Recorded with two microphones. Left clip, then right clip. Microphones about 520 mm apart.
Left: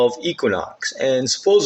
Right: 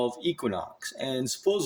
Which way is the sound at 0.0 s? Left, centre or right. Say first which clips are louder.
Left 11 dB; right.